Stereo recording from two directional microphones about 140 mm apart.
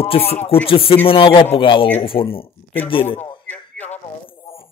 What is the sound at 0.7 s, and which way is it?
Speech, 40° left (ahead or behind).